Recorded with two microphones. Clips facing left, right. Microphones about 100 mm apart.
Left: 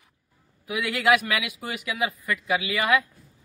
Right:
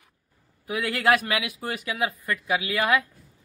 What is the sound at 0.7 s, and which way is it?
Speech, 40° right (ahead or behind).